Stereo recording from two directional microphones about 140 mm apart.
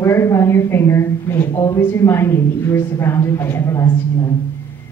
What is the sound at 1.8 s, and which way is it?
A woman's voice, 15° left (ahead or behind).